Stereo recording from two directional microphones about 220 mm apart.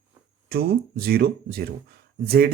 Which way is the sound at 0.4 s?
45° right (ahead or behind).